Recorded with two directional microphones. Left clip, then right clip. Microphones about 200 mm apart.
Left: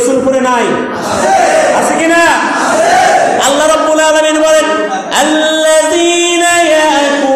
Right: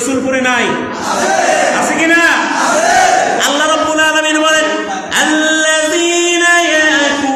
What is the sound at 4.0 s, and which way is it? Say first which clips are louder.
Speech: left 3 dB; 5° right (ahead or behind).